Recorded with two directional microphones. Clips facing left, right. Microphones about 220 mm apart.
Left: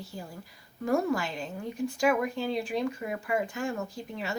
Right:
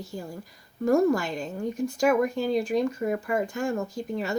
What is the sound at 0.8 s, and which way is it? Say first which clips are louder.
Speech: right 6 dB; 45° right (ahead or behind).